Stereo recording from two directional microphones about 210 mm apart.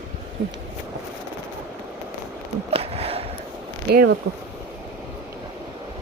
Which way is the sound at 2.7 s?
30° right (ahead or behind).